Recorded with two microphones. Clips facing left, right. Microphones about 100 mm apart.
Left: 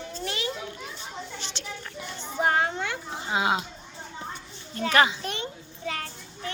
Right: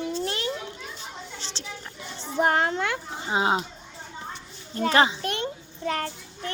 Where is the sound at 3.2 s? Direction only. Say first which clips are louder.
Right 2 dB; 30° right (ahead or behind).